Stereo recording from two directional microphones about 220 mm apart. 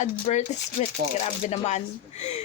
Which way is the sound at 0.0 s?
35° left (ahead or behind).